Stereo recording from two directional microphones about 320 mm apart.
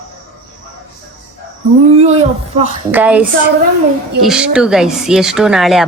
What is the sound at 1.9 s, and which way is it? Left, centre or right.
Speech, centre.